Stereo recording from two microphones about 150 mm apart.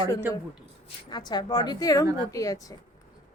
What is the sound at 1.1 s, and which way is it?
A woman's voice, 30° left (ahead or behind).